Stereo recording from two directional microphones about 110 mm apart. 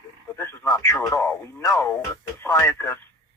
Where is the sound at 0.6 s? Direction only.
30° left (ahead or behind).